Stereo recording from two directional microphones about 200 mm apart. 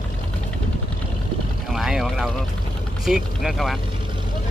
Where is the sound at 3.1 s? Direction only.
Centre (ahead or behind).